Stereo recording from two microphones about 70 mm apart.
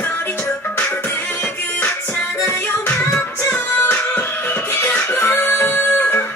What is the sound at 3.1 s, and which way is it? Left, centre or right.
Music, left.